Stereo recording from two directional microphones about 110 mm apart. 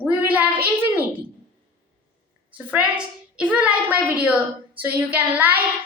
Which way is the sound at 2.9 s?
10° right (ahead or behind).